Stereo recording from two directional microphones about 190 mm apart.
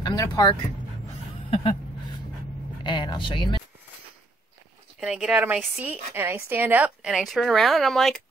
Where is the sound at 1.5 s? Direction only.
30° left (ahead or behind).